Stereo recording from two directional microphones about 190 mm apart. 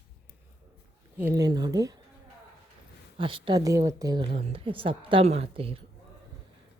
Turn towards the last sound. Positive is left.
turn(degrees=-30)  # may be behind; listen again after turning